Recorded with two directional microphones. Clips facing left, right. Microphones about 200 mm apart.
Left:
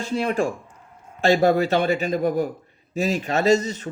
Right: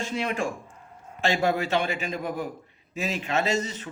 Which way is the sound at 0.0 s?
35° left (ahead or behind).